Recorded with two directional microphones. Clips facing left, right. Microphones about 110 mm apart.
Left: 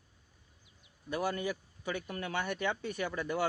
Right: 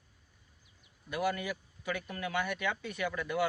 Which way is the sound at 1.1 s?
30° left (ahead or behind).